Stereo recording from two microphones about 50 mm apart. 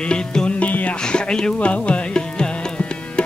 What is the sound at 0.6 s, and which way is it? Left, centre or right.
Music, left.